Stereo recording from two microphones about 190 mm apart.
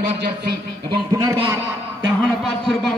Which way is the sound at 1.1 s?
20° right (ahead or behind).